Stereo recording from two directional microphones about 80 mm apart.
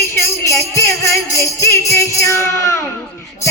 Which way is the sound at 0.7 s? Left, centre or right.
Left.